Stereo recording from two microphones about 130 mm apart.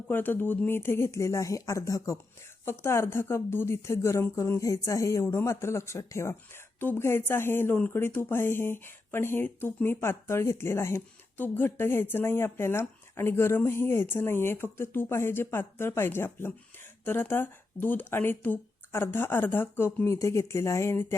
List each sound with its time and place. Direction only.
0.1 s a woman's voice: 15° left (ahead or behind)